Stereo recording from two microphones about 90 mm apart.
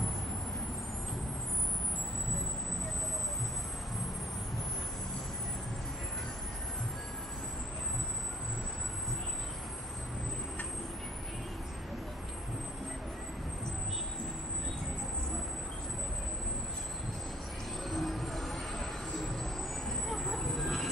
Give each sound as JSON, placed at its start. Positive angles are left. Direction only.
{"t": 17.8, "sound": "music", "side_deg": 0}
{"t": 19.9, "sound": "vehicle", "side_deg": 0}